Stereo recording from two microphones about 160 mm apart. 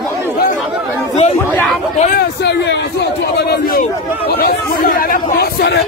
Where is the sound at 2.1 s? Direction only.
90° left.